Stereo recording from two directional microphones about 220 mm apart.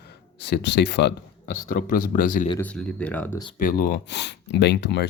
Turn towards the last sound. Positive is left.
turn(degrees=50)  # may be behind; listen again after turning